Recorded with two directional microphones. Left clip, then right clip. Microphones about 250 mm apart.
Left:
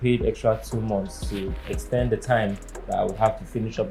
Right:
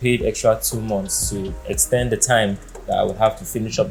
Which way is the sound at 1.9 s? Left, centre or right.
Right.